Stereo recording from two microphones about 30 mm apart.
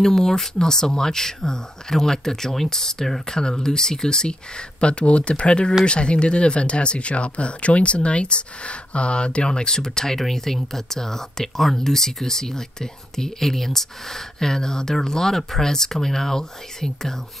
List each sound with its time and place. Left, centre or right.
0.0 s speech: centre